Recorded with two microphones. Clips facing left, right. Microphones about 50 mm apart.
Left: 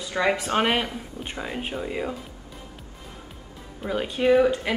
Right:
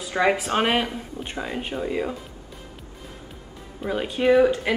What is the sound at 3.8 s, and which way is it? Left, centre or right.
Speech, centre.